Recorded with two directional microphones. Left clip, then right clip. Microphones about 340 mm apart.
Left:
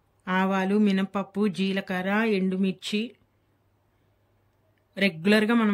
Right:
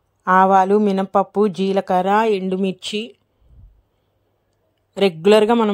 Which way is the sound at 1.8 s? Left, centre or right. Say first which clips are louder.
Right 13 dB; right.